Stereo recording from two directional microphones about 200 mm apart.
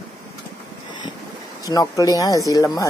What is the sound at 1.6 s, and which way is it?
Speech, 15° left (ahead or behind).